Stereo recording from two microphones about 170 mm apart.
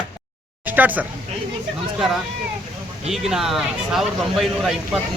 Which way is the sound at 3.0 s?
Centre (ahead or behind).